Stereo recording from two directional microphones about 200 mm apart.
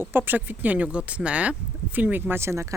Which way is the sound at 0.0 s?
10° right (ahead or behind).